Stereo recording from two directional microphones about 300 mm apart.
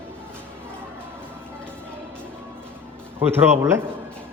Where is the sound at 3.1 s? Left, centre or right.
Centre.